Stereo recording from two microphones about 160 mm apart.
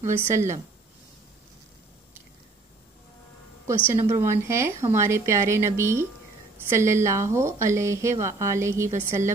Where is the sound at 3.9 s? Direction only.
20° right (ahead or behind).